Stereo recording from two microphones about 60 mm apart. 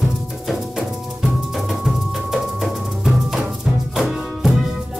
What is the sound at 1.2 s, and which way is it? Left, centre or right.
Music, centre.